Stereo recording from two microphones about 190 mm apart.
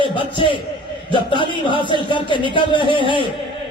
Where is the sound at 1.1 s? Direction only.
25° left (ahead or behind).